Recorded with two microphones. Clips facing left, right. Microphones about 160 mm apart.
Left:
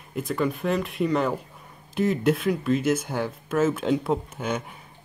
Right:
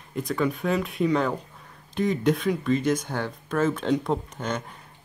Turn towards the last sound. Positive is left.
turn(degrees=5)  # may be behind; listen again after turning